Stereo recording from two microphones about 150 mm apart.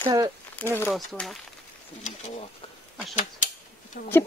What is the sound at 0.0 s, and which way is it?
Speech, 25° right (ahead or behind).